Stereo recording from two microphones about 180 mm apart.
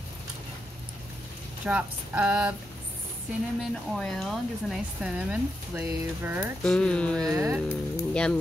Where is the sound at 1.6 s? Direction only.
5° right (ahead or behind).